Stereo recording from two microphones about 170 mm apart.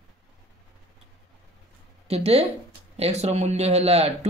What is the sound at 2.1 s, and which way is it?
Speech, 35° right (ahead or behind).